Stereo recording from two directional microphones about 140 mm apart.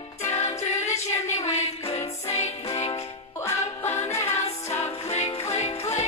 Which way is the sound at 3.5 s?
20° left (ahead or behind).